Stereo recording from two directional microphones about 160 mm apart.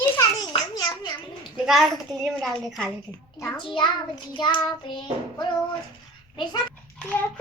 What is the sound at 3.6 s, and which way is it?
Child singing, 30° left (ahead or behind).